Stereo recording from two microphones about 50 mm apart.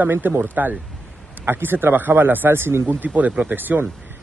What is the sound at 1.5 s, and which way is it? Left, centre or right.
A man's voice, right.